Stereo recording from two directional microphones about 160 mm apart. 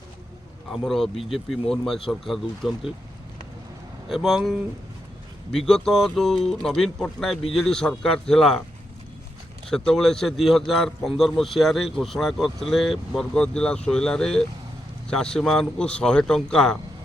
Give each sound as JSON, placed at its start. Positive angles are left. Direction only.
{"t": 0.7, "sound": "speech", "side_deg": 0}
{"t": 4.1, "sound": "speech", "side_deg": 0}
{"t": 9.6, "sound": "speech", "side_deg": 5}